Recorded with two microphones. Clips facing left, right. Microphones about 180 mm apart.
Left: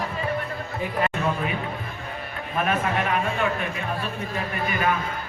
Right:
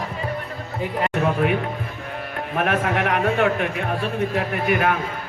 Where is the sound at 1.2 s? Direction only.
70° right (ahead or behind).